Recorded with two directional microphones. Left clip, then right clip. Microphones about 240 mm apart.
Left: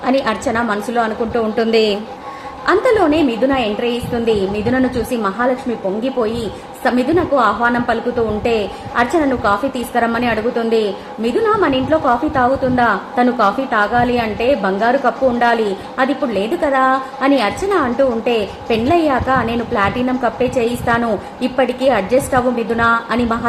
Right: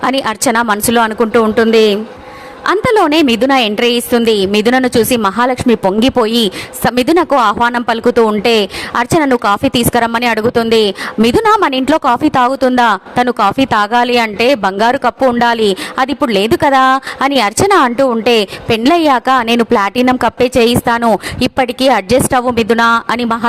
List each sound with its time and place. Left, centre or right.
0.0 s a woman's voice: right
2.6 s a woman's voice: right
6.8 s a woman's voice: right
9.0 s a woman's voice: right